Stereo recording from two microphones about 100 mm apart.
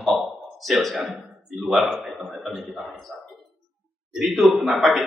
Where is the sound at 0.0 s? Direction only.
Centre (ahead or behind).